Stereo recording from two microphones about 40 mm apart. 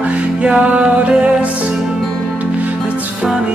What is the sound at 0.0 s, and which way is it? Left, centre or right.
Music, right.